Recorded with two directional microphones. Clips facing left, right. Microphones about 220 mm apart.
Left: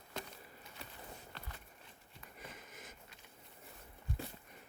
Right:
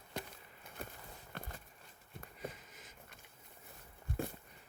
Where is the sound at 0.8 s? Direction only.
50° right (ahead or behind).